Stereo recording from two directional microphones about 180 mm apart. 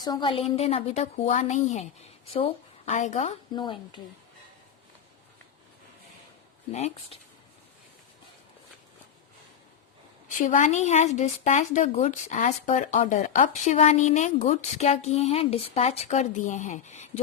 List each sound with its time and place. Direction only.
0.0 s a woman's voice: 25° left (ahead or behind)
3.5 s speech: 25° left (ahead or behind)
6.7 s a woman's voice: 40° left (ahead or behind)
10.2 s a woman's voice: 45° left (ahead or behind)